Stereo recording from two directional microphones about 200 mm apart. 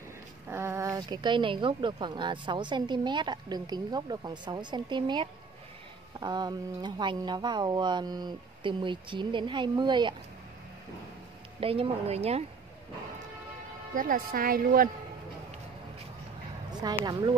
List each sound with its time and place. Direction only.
0.5 s a woman's voice: 15° right (ahead or behind)
11.6 s speech: 30° right (ahead or behind)
13.9 s a woman's voice: 45° right (ahead or behind)
17.0 s a woman's voice: 20° right (ahead or behind)